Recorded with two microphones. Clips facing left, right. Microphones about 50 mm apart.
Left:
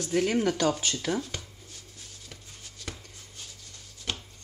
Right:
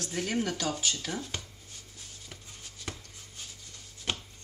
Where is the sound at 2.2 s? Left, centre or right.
Centre.